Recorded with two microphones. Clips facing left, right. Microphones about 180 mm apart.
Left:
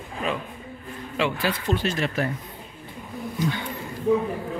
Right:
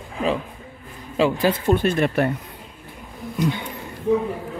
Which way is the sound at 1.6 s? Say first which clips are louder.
Right 6 dB; 55° right (ahead or behind).